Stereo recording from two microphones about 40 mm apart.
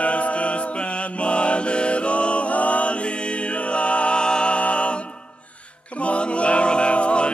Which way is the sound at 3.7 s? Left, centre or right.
Left.